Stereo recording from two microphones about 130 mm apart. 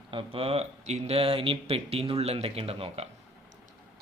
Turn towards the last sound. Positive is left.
turn(degrees=-50)  # may be behind; listen again after turning